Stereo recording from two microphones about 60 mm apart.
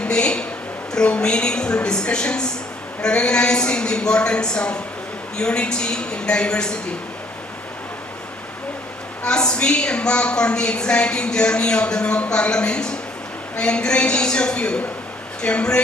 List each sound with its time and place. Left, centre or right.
0.0 s a sound: centre
0.9 s a woman's voice: centre
9.2 s a woman's voice: centre